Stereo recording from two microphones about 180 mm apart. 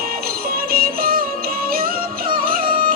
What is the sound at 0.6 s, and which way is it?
Music, 55° right (ahead or behind).